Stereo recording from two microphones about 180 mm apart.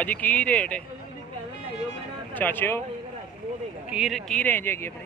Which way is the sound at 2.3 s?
10° left (ahead or behind).